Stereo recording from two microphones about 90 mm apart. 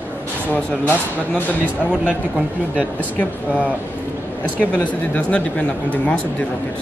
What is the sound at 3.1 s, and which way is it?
Speech, 15° left (ahead or behind).